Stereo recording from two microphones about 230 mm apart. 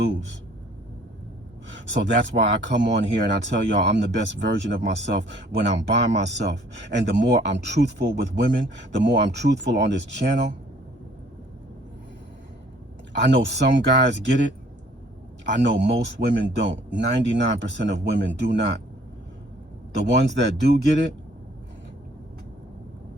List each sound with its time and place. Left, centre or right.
1.6 s speech: right
13.2 s speech: right
15.5 s speech: right
20.2 s speech: right